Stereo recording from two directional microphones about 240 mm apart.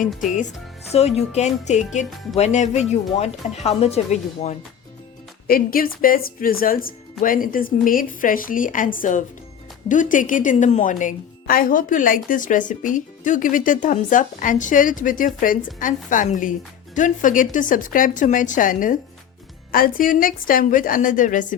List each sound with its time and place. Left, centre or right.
0.1 s speech: centre
0.9 s a woman's voice: left